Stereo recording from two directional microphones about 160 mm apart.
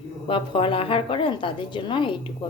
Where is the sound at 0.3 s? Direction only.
35° left (ahead or behind).